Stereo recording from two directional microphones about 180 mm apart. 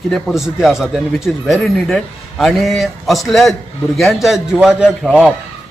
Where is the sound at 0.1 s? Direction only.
Centre (ahead or behind).